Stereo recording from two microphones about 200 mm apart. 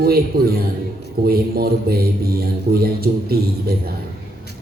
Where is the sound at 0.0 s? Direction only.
50° right (ahead or behind).